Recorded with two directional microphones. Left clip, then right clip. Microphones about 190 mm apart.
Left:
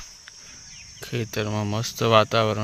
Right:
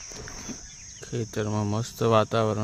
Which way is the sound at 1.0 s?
Centre (ahead or behind).